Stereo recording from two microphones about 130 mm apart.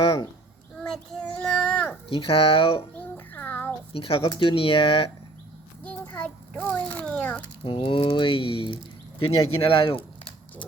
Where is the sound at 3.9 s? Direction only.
45° left (ahead or behind).